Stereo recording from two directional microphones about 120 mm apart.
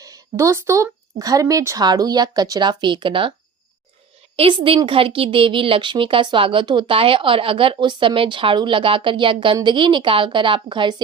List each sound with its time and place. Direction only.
0.0 s speech: 30° right (ahead or behind); by 3.3 s 45° right (ahead or behind)
4.4 s speech: 50° right (ahead or behind)